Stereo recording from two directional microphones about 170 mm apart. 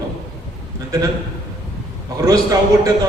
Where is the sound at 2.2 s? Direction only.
20° right (ahead or behind).